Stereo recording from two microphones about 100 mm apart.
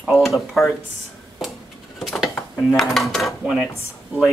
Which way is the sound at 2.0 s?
5° right (ahead or behind).